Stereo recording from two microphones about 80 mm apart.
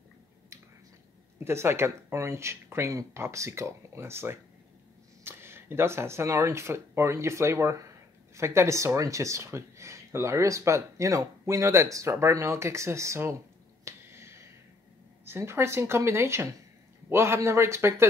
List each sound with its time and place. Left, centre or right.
1.4 s speech: right
13.8 s finger snapping: right
15.2 s speech: right